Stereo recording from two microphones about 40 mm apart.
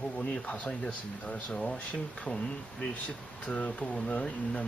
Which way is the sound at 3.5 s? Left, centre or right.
Left.